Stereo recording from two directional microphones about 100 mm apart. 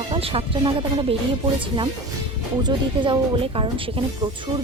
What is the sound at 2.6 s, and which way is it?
Speech, 50° right (ahead or behind).